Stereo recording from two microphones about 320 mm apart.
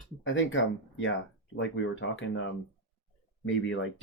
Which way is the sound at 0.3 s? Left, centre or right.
Left.